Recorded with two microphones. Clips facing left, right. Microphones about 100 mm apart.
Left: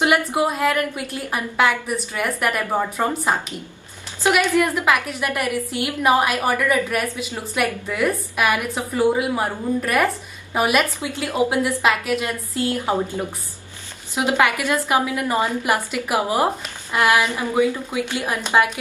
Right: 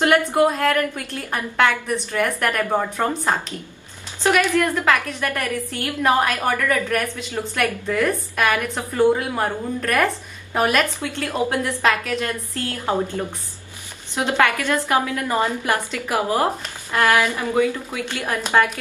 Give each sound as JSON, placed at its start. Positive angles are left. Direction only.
{"t": 0.0, "sound": "a woman's voice", "side_deg": 10}